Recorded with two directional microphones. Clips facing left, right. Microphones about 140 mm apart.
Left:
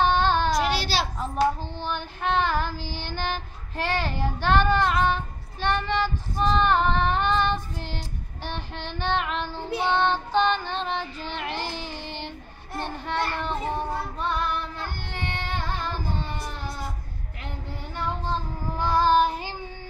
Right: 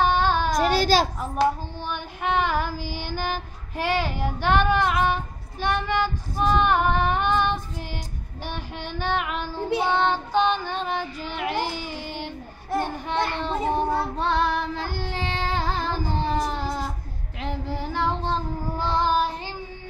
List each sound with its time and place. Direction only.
0.0 s child singing: 10° right (ahead or behind)
0.6 s a sound: 45° right (ahead or behind)
1.8 s child singing: 15° right (ahead or behind)
13.9 s child singing: 85° right
18.8 s child singing: 25° right (ahead or behind)
19.0 s child singing: 5° right (ahead or behind)